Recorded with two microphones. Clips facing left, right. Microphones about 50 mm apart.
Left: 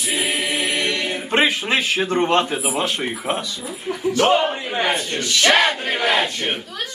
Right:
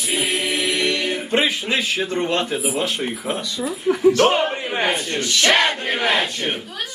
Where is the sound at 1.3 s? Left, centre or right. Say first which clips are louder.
Left 3 dB; left.